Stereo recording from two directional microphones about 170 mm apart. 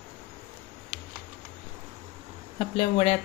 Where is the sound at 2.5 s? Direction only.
35° left (ahead or behind).